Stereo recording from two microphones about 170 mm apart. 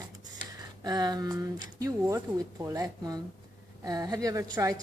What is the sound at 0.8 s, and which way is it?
Speech, 25° right (ahead or behind).